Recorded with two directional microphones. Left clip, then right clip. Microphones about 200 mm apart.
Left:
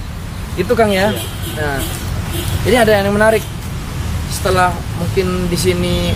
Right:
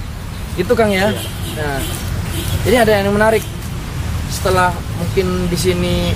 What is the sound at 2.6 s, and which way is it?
Speech, 10° left (ahead or behind).